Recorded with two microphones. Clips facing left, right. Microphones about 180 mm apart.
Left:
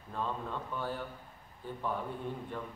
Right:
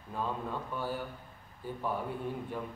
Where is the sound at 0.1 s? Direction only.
5° right (ahead or behind).